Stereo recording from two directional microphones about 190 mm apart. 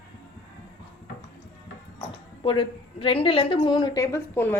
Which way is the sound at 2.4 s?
25° left (ahead or behind).